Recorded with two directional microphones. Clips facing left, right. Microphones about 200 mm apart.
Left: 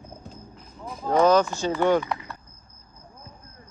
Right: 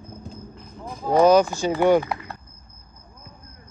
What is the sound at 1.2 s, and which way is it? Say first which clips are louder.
Speech: right 4 dB; 10° right (ahead or behind).